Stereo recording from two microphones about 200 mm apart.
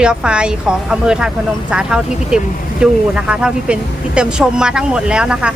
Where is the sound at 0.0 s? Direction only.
5° right (ahead or behind).